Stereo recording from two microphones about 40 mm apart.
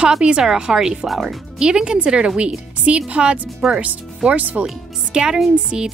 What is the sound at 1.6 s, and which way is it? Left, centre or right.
A woman's voice, right.